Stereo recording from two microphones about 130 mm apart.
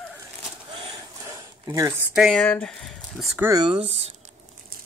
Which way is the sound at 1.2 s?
20° right (ahead or behind).